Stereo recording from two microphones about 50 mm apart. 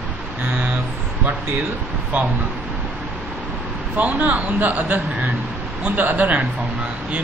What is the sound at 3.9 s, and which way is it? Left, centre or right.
Speech, right.